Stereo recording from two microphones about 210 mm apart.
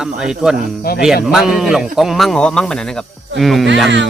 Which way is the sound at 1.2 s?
Centre (ahead or behind).